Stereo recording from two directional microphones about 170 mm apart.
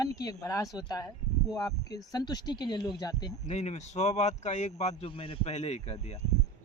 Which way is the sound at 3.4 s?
40° left (ahead or behind).